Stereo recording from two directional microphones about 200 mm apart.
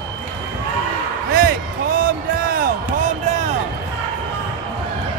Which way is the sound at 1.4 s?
45° right (ahead or behind).